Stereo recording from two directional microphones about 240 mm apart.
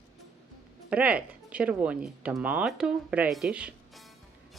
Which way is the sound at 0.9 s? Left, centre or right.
Centre.